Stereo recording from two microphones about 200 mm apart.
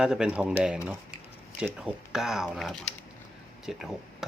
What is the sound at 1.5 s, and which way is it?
Speech, centre (ahead or behind).